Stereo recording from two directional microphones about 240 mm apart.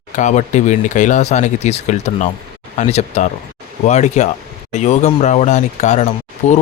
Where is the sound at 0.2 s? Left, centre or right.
Left.